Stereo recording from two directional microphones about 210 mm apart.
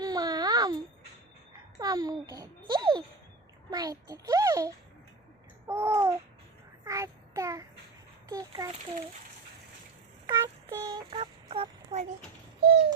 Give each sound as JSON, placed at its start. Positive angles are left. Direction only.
{"t": 0.0, "sound": "baby cry", "side_deg": -20}
{"t": 1.8, "sound": "babbling", "side_deg": -15}
{"t": 3.7, "sound": "a child's voice", "side_deg": -15}
{"t": 5.6, "sound": "babbling", "side_deg": -10}
{"t": 6.8, "sound": "child singing", "side_deg": -15}
{"t": 8.3, "sound": "a sound", "side_deg": -15}
{"t": 10.2, "sound": "a sound", "side_deg": -15}